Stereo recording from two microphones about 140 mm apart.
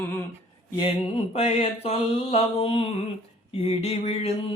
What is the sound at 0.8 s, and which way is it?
Mantra, 40° left (ahead or behind).